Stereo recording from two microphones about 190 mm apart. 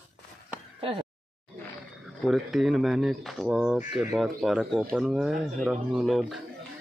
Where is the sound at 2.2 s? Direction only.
Centre (ahead or behind).